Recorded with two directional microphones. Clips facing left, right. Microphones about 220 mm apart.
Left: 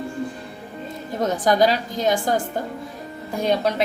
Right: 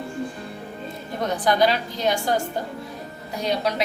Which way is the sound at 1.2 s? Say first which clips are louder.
Left 2 dB; 45° left (ahead or behind).